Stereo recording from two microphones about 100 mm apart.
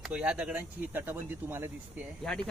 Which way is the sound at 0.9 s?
20° right (ahead or behind).